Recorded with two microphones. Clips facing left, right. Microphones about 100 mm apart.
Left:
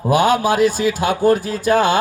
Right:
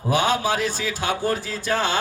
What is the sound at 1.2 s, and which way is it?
Mantra, 50° left (ahead or behind).